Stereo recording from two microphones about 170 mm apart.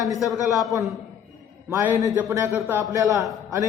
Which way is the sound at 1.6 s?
10° right (ahead or behind).